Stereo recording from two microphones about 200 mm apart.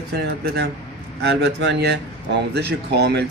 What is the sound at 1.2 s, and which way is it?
Speech, 60° right (ahead or behind).